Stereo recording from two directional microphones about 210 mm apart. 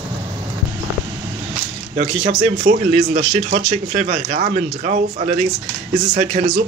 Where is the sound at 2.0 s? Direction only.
30° right (ahead or behind).